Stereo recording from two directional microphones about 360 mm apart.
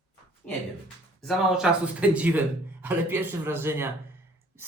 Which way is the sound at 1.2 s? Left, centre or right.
Centre.